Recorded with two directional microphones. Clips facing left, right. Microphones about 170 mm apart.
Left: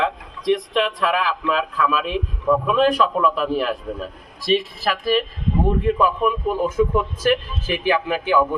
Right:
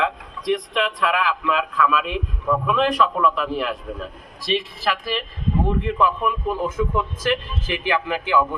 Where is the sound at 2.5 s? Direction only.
10° left (ahead or behind).